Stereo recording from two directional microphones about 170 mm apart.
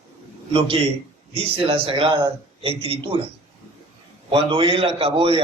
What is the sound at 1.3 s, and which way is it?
A man's voice, 35° right (ahead or behind).